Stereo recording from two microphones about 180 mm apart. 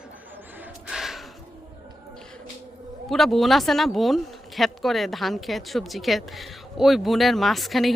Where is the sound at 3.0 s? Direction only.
Centre (ahead or behind).